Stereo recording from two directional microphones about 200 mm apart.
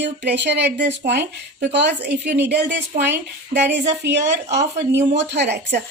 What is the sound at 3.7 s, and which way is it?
Speech, 60° right (ahead or behind).